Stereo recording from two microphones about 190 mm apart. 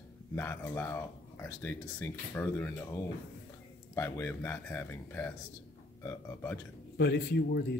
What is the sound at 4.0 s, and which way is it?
Speech, 10° left (ahead or behind).